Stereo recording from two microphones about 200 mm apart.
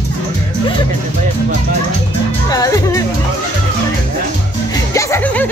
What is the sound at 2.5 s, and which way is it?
Speech, 15° left (ahead or behind).